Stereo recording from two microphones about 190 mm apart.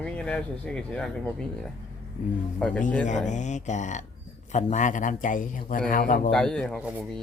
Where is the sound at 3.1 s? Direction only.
40° left (ahead or behind).